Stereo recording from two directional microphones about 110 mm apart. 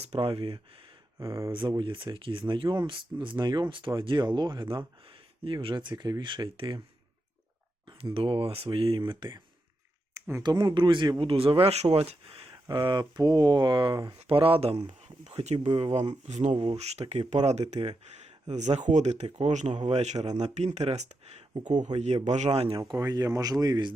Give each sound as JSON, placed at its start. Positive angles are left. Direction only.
{"t": 0.0, "sound": "speech", "side_deg": -65}
{"t": 1.2, "sound": "speech", "side_deg": -30}
{"t": 1.8, "sound": "speech", "side_deg": -50}
{"t": 8.1, "sound": "speech", "side_deg": -55}
{"t": 10.2, "sound": "a sound", "side_deg": -25}
{"t": 10.4, "sound": "speech", "side_deg": -45}
{"t": 11.2, "sound": "speech", "side_deg": -55}
{"t": 12.6, "sound": "speech", "side_deg": -45}
{"t": 14.3, "sound": "speech", "side_deg": -55}
{"t": 15.0, "sound": "speech", "side_deg": -90}
{"t": 15.7, "sound": "speech", "side_deg": -60}
{"t": 16.2, "sound": "speech", "side_deg": -90}
{"t": 18.3, "sound": "speech", "side_deg": -90}
{"t": 22.8, "sound": "speech", "side_deg": -35}